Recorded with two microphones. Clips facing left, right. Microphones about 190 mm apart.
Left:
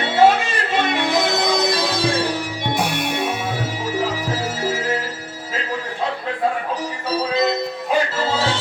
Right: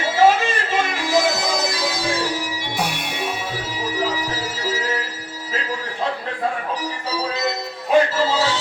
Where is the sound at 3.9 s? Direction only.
50° left (ahead or behind).